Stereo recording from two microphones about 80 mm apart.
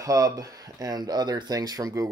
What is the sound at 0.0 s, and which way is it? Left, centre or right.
Speech, right.